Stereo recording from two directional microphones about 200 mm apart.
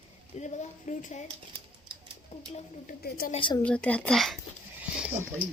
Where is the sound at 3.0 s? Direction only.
50° left (ahead or behind).